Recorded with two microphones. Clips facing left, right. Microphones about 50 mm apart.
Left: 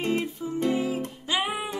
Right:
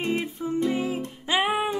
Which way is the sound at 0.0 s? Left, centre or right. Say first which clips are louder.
Even; right.